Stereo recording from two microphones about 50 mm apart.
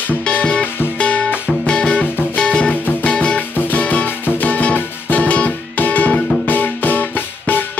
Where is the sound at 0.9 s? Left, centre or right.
Left.